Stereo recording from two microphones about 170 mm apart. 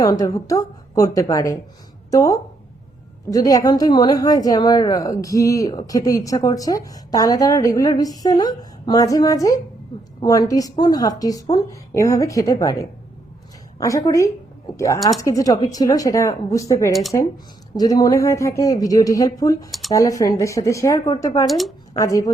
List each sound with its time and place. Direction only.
0.1 s a woman's voice: 20° left (ahead or behind)
16.9 s speech: centre (ahead or behind)
17.7 s a woman's voice: 20° left (ahead or behind)
21.4 s speech: centre (ahead or behind)
21.9 s a woman's voice: 20° left (ahead or behind)